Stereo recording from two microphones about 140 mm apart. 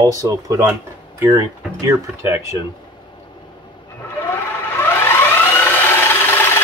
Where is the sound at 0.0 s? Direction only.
25° right (ahead or behind).